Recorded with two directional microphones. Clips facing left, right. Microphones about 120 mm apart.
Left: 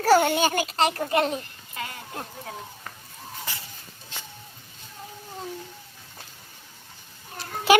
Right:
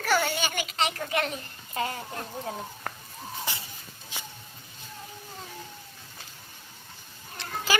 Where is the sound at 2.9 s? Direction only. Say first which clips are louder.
Right 5 dB; 60° right (ahead or behind).